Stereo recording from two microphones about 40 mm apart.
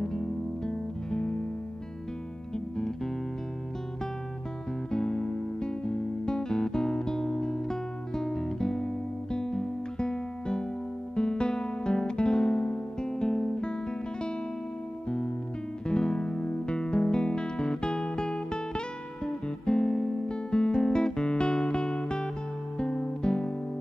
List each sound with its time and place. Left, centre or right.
0.7 s music: centre
4.9 s guitar: left
15.9 s music: left